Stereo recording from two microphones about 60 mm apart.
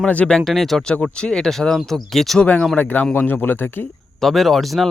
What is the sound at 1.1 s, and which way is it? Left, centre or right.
Speech, centre.